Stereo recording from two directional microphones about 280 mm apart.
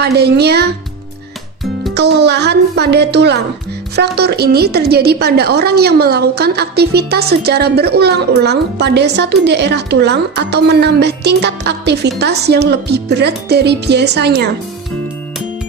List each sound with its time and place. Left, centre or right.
0.0 s a woman's voice: right
2.0 s a woman's voice: right